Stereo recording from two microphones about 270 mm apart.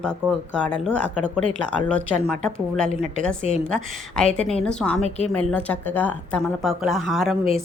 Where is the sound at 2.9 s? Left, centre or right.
Left.